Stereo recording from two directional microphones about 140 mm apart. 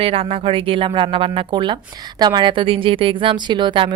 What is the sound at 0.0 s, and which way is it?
A woman's voice, 40° right (ahead or behind).